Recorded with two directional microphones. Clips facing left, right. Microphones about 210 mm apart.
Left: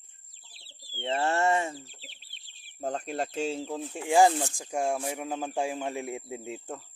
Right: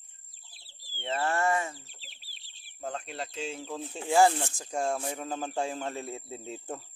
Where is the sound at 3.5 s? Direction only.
35° left (ahead or behind).